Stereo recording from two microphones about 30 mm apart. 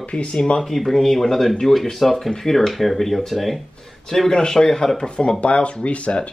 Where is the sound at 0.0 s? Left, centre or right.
Left.